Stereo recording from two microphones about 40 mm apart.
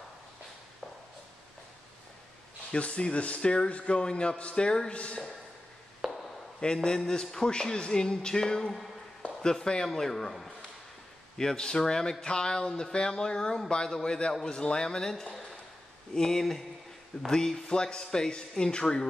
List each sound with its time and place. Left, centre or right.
2.8 s a man's voice: left
6.0 s a sound: centre
6.6 s a man's voice: centre